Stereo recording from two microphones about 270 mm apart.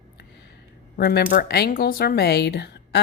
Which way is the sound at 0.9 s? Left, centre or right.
Left.